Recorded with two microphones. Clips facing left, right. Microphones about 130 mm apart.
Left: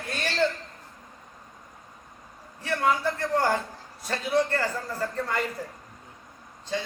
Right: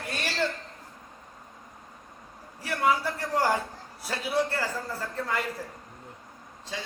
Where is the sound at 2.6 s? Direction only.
10° right (ahead or behind).